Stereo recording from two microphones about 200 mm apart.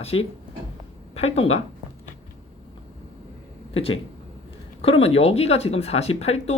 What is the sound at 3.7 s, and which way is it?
Speech, 30° left (ahead or behind).